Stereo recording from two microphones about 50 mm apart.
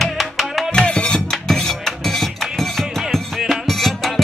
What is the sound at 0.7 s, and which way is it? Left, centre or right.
Music, centre.